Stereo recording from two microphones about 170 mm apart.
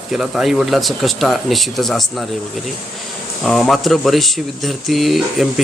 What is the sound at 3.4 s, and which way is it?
Speech, 5° left (ahead or behind).